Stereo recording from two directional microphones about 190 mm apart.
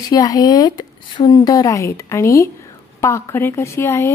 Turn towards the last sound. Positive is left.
turn(degrees=15)  # may be behind; listen again after turning